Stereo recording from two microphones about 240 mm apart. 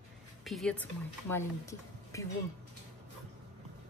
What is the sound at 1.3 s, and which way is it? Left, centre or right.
Speech, centre.